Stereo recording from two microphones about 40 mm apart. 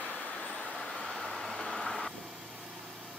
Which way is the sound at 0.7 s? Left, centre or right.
Centre.